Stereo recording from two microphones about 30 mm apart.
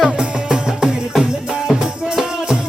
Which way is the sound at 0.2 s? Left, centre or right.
Right.